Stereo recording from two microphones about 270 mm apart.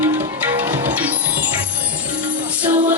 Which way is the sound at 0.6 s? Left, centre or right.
Centre.